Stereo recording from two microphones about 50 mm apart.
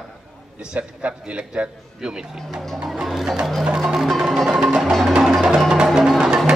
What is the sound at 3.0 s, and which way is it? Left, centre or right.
Music, centre.